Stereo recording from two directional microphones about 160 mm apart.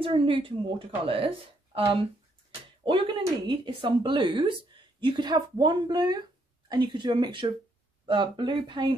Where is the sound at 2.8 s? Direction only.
30° right (ahead or behind).